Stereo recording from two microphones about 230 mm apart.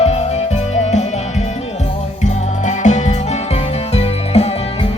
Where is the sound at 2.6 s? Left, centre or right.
Left.